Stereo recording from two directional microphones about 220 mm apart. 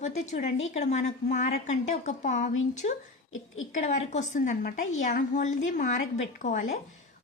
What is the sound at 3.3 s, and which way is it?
Speech, 65° left (ahead or behind).